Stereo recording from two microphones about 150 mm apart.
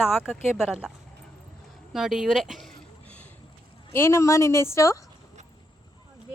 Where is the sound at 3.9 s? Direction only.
15° left (ahead or behind).